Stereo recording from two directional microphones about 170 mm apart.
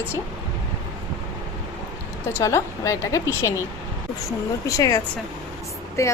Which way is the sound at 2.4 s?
20° left (ahead or behind).